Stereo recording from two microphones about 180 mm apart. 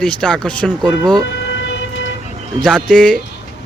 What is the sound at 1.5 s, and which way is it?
Emergency vehicle, 90° left.